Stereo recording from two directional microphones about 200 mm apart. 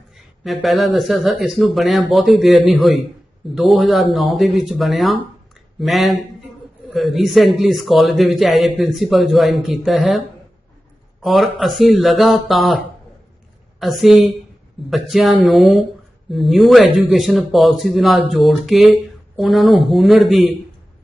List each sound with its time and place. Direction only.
0.4 s a man's voice: centre (ahead or behind)